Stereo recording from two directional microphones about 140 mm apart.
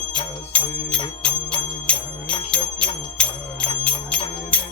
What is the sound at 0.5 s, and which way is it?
Music, 10° left (ahead or behind).